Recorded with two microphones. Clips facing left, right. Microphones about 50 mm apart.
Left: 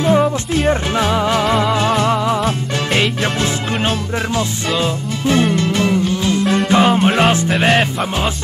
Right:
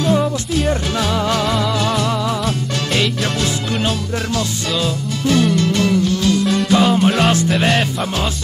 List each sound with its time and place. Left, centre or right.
0.0 s music: left
4.4 s music: left